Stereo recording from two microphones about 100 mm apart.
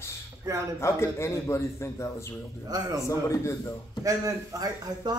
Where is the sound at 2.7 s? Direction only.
40° right (ahead or behind).